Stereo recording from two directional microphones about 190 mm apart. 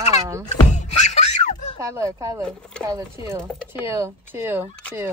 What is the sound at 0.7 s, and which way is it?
Music, 40° left (ahead or behind).